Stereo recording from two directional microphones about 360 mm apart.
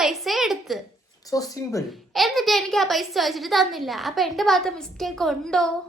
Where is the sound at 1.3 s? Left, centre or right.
Centre.